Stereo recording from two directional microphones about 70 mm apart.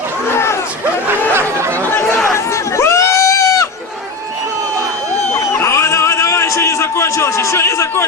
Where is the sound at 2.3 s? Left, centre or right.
Left.